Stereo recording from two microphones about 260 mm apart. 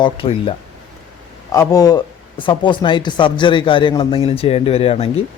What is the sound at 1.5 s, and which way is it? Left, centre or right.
Speech, centre.